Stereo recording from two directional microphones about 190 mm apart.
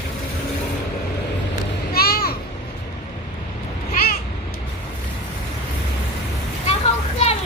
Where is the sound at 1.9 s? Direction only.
55° left (ahead or behind).